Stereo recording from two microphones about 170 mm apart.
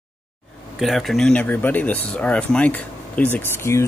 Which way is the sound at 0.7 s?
Centre (ahead or behind).